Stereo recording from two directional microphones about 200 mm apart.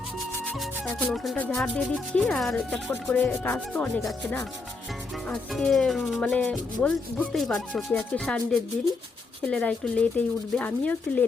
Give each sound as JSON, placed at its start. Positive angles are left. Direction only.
{"t": 0.4, "sound": "music", "side_deg": 0}
{"t": 9.5, "sound": "music", "side_deg": 5}